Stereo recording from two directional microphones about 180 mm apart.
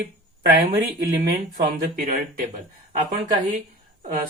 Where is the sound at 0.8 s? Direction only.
60° right (ahead or behind).